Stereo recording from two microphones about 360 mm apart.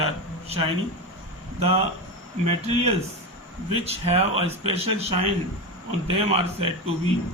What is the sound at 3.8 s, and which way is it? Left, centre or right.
A man's voice, centre.